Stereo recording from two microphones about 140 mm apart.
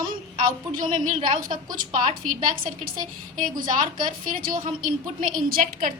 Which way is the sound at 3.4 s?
70° right (ahead or behind).